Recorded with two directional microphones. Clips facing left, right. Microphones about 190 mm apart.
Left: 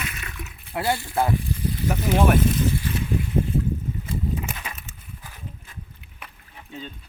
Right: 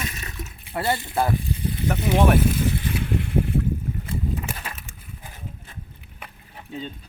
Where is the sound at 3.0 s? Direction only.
65° right (ahead or behind).